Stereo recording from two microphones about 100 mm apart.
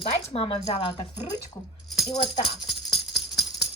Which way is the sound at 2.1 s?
90° left.